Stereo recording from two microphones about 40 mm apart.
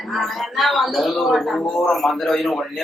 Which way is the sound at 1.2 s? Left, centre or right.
Centre.